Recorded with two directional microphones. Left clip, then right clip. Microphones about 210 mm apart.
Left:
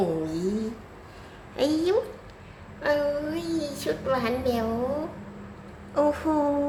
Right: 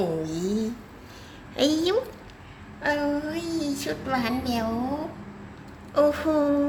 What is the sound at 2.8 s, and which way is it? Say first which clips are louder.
A woman's voice: left 1 dB; 5° left (ahead or behind).